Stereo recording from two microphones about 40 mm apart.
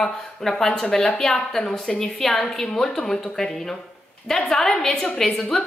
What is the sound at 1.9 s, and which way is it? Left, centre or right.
A woman's voice, centre.